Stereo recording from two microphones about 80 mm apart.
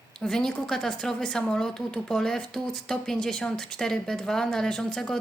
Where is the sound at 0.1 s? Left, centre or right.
Centre.